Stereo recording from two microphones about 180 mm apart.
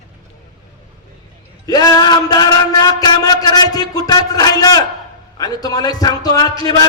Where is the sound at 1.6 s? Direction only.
20° left (ahead or behind).